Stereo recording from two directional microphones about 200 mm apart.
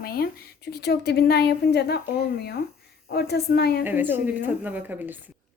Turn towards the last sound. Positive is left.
turn(degrees=-10)  # may be behind; listen again after turning